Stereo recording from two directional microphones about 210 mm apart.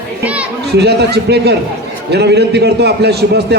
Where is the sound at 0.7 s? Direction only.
50° right (ahead or behind).